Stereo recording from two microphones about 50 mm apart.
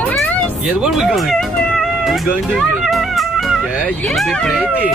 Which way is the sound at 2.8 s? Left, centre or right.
Centre.